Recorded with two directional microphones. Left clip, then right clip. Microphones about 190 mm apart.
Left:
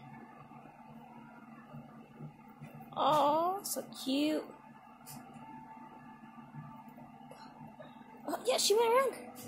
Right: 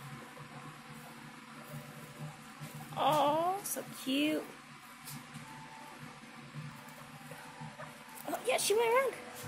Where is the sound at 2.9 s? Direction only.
20° left (ahead or behind).